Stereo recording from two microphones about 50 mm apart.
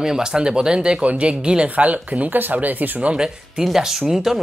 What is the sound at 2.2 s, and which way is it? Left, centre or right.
Speech, right.